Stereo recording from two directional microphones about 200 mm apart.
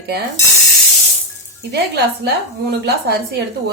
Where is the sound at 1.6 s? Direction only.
55° right (ahead or behind).